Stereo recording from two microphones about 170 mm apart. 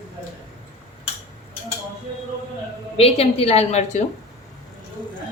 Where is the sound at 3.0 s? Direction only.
35° left (ahead or behind).